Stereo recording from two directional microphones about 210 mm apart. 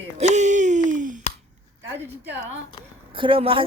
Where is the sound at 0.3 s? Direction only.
35° right (ahead or behind).